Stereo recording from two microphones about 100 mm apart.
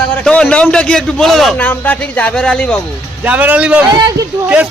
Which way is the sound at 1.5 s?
15° left (ahead or behind).